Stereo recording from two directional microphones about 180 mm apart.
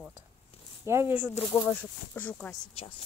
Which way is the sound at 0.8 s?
15° right (ahead or behind).